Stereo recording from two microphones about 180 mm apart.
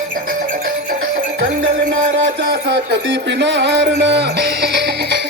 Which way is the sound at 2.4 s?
75° right (ahead or behind).